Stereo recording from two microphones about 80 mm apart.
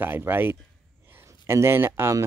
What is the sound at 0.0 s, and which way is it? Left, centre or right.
Speech, right.